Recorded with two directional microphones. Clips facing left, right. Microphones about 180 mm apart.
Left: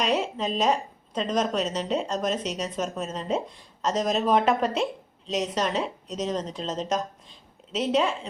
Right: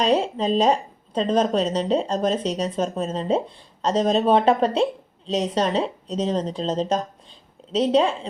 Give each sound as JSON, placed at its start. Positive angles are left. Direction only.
{"t": 0.0, "sound": "a woman's voice", "side_deg": -30}